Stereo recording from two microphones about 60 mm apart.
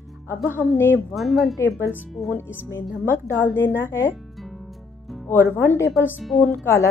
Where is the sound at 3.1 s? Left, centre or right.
Left.